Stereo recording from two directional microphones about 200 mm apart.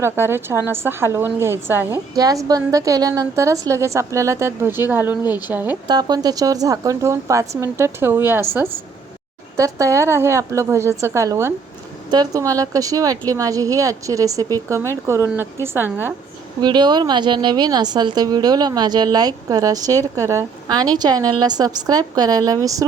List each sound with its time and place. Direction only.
0.0 s a woman's voice: 10° right (ahead or behind)
5.9 s a woman's voice: 20° right (ahead or behind)
16.6 s a woman's voice: 20° right (ahead or behind)